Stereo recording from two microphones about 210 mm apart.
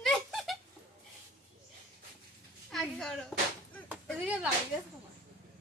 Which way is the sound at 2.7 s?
Centre (ahead or behind).